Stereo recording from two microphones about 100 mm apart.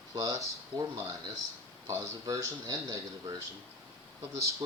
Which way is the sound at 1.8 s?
30° right (ahead or behind).